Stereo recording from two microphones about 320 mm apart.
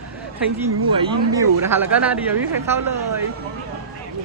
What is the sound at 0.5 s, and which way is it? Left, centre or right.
Speech, centre.